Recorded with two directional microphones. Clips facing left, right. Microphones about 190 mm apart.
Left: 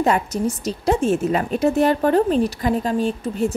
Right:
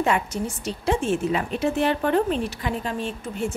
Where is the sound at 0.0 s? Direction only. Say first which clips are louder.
Left 4 dB; 40° left (ahead or behind).